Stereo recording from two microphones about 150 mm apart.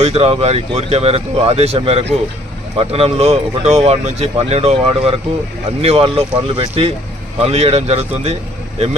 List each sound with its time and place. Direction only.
0.0 s speech: 40° right (ahead or behind)